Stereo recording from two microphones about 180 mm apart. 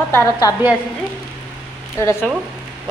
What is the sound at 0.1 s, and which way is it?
Speech, 20° left (ahead or behind).